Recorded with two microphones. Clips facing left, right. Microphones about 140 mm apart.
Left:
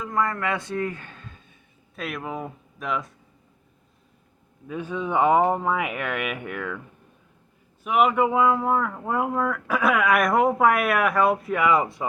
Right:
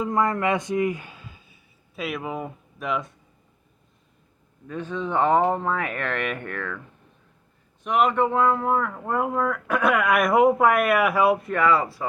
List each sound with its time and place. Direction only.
0.0 s speech: 20° right (ahead or behind); by 3.2 s centre (ahead or behind)
4.7 s speech: 10° left (ahead or behind)
7.9 s speech: 5° left (ahead or behind)
11.5 s speech: 15° left (ahead or behind)